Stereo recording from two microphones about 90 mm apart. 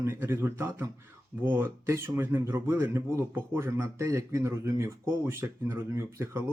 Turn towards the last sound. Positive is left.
turn(degrees=-30)  # may be behind; listen again after turning